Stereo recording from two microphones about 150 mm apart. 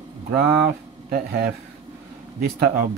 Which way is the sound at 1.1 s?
85° right.